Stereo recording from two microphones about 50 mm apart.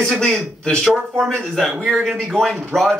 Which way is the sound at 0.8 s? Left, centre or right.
Centre.